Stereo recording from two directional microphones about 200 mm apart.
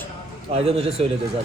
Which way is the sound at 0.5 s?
30° right (ahead or behind).